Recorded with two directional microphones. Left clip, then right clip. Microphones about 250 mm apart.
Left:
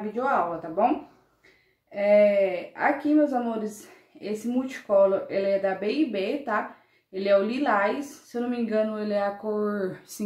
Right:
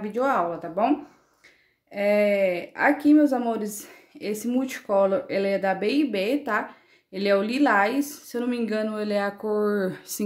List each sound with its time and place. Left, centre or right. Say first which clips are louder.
0.1 s speech: right 2 dB; right
2.0 s speech: left 2 dB; right